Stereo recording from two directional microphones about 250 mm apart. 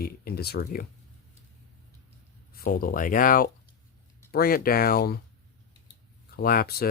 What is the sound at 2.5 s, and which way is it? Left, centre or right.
Speech, left.